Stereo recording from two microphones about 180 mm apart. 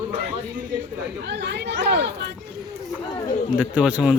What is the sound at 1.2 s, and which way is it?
Speech, 70° right (ahead or behind).